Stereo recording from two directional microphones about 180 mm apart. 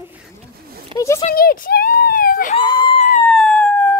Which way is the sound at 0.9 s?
30° right (ahead or behind).